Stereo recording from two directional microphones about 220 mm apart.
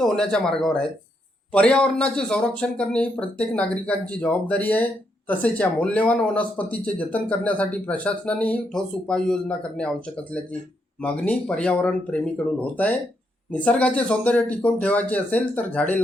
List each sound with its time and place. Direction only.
0.0 s speech: 5° left (ahead or behind)
11.0 s speech: 5° left (ahead or behind)